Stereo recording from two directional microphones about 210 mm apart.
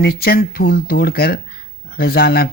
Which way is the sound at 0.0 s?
45° left (ahead or behind).